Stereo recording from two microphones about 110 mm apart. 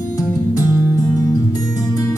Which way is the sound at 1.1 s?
35° left (ahead or behind).